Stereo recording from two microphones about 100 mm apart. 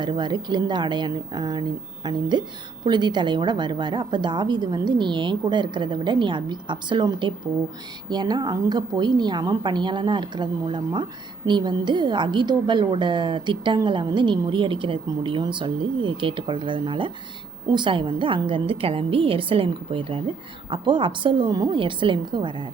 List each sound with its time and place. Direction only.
0.0 s a woman's voice: 50° right (ahead or behind)
21.8 s a woman's voice: 55° right (ahead or behind)